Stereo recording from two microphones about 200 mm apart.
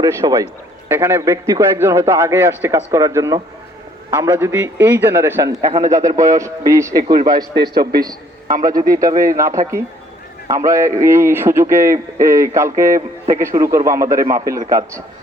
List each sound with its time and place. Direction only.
0.0 s a man's voice: 15° right (ahead or behind)
7.5 s a man's voice: 55° right (ahead or behind)
8.6 s a man's voice: 15° right (ahead or behind)